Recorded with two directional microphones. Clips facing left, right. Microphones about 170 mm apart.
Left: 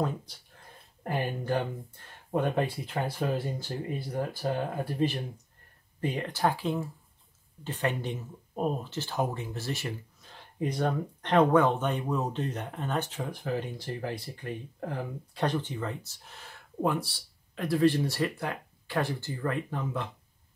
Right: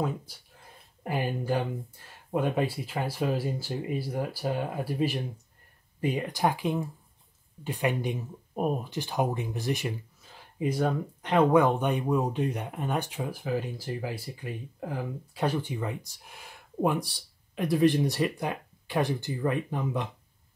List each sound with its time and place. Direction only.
1.0 s speech: 5° right (ahead or behind)
10.2 s speech: 5° right (ahead or behind)